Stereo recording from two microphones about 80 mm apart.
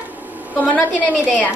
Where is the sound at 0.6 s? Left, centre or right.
Centre.